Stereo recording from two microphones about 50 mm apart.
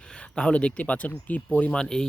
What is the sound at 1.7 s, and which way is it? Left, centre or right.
Speech, centre.